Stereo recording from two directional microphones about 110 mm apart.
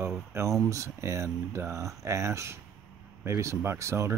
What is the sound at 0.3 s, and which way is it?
Speech, 25° right (ahead or behind).